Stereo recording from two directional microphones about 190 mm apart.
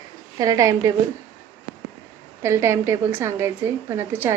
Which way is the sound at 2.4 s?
15° right (ahead or behind).